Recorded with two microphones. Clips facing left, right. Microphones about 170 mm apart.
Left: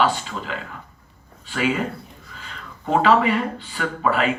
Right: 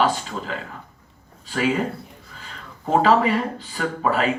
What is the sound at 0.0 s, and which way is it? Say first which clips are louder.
Speech: even; 40° right (ahead or behind).